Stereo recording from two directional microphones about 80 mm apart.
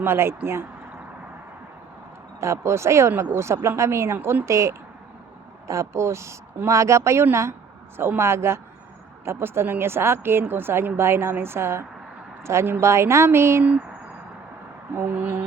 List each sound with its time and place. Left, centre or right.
0.0 s speech: right
2.4 s speech: right
14.9 s a sound: centre